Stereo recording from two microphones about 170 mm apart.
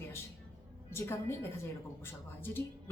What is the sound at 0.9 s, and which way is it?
Speech, 15° left (ahead or behind).